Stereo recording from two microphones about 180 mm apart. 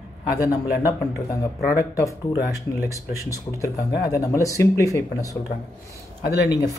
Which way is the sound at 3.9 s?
60° left (ahead or behind).